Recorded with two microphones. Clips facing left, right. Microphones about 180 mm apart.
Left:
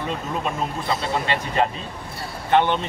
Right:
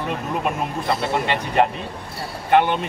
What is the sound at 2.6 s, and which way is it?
Speech, 10° right (ahead or behind).